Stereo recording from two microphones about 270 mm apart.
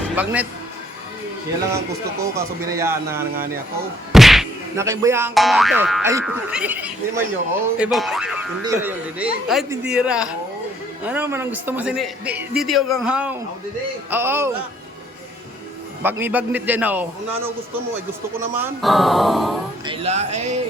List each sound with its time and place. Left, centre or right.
0.2 s a man's voice: centre
2.2 s a man's voice: centre
4.1 s whack: centre
4.9 s a man's voice: centre
16.0 s a man's voice: centre
18.3 s speech: centre
19.8 s speech: centre